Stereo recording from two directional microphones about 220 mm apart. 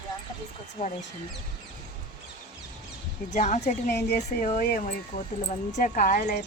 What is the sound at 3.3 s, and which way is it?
Speech, 30° left (ahead or behind).